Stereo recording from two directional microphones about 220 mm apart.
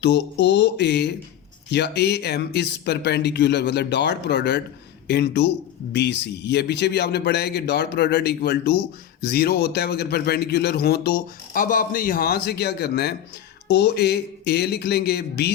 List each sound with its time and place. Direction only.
0.0 s a man's voice: 55° left (ahead or behind)